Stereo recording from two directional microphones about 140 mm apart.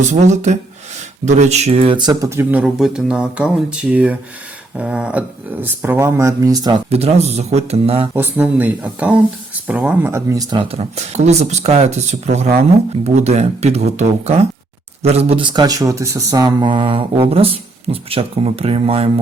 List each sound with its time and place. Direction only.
0.1 s speech: 55° right (ahead or behind)
2.0 s speech: 30° right (ahead or behind)
2.3 s speech: 15° right (ahead or behind); by 6.8 s 30° right (ahead or behind)
6.9 s speech: 50° right (ahead or behind)
8.1 s speech: 15° right (ahead or behind); by 19.1 s 45° right (ahead or behind)